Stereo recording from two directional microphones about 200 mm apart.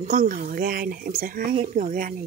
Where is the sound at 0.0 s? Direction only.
40° right (ahead or behind).